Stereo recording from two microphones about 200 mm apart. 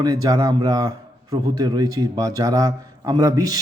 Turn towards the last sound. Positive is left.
turn(degrees=-15)  # may be behind; listen again after turning